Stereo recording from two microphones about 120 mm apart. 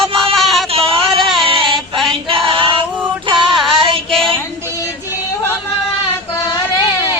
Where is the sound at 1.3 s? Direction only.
45° right (ahead or behind).